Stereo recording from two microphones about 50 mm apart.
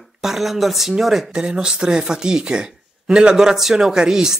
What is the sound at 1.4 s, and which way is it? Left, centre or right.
Speech, centre.